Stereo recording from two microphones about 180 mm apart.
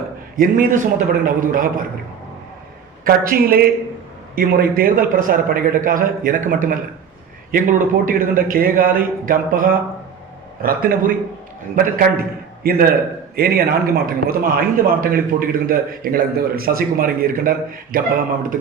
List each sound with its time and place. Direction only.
0.3 s a man's voice: 50° right (ahead or behind)
3.0 s a man's voice: 55° right (ahead or behind)